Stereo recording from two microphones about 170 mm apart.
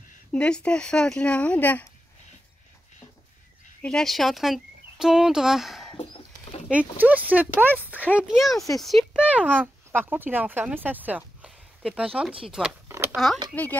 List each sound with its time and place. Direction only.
0.3 s speech: 5° left (ahead or behind)
3.8 s speech: 5° left (ahead or behind)
5.9 s a sound: 35° left (ahead or behind)
6.7 s speech: 10° right (ahead or behind)
12.8 s a sound: 15° right (ahead or behind)
13.1 s speech: centre (ahead or behind)